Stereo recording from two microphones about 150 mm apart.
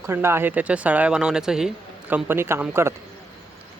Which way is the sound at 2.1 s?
15° right (ahead or behind).